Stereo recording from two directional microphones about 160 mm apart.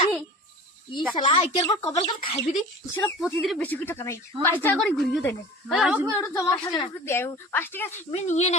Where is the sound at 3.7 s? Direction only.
15° left (ahead or behind).